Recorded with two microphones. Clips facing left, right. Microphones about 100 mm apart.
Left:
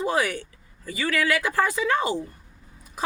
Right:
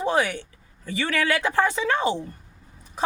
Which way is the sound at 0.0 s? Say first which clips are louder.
Right 1 dB; 25° right (ahead or behind).